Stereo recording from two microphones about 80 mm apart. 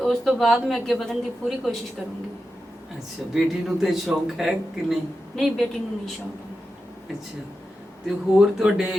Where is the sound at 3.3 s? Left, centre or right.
Centre.